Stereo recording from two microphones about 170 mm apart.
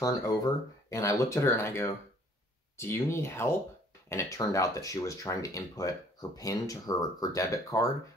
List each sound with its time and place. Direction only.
0.0 s speech: 20° left (ahead or behind)